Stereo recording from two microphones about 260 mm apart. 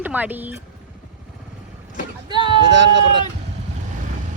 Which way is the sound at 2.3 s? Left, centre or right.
Centre.